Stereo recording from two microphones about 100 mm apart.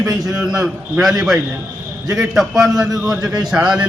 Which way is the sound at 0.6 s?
5° right (ahead or behind).